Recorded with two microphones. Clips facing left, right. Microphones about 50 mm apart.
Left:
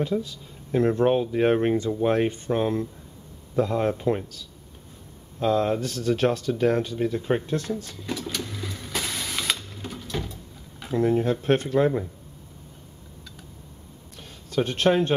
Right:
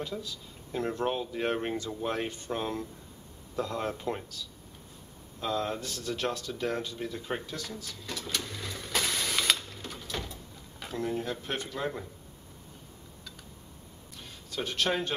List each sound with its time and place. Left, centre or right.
0.0 s speech: left
5.4 s speech: left
7.4 s speech: left
8.1 s printer: centre
9.8 s a sound: centre
11.0 s speech: left
14.5 s speech: left